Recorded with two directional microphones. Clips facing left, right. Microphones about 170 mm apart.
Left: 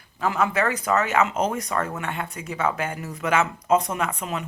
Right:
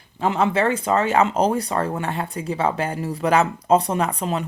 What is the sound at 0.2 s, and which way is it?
Speech, 25° right (ahead or behind).